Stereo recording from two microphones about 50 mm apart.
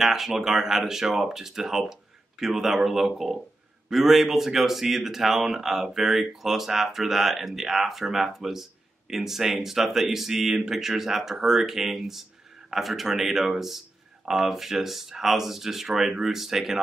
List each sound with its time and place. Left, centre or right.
0.0 s speech: centre